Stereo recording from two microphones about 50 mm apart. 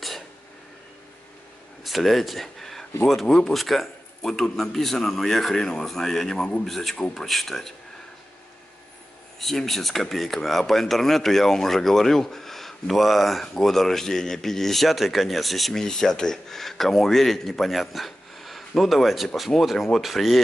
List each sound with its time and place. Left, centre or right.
1.9 s a man's voice: centre
6.6 s speech: centre
9.4 s speech: centre